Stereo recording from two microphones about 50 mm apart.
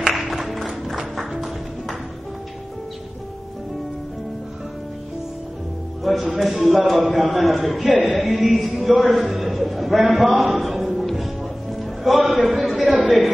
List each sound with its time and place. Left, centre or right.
0.0 s music: centre
6.0 s a man's voice: centre
7.9 s music: centre
8.2 s a man's voice: centre
11.7 s music: centre
12.4 s a sound: centre